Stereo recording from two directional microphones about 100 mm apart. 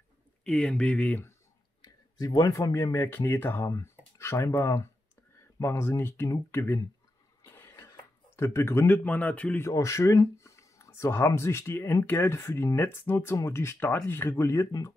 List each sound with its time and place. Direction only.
0.4 s speech: 10° left (ahead or behind)
1.8 s speech: 40° left (ahead or behind); by 6.8 s 25° left (ahead or behind)
7.4 s cough: 25° left (ahead or behind)
7.9 s speech: 30° left (ahead or behind); by 9.6 s 15° left (ahead or behind)
9.6 s speech: 30° left (ahead or behind)